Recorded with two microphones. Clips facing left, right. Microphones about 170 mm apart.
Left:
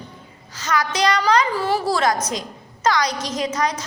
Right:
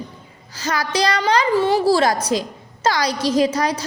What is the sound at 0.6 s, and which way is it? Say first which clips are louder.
A woman's voice: even; 35° right (ahead or behind).